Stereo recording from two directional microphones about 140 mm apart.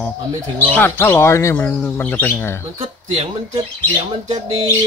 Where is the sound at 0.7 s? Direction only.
15° left (ahead or behind).